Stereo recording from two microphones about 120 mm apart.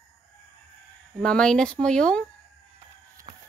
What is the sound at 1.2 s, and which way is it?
Speech, 5° left (ahead or behind).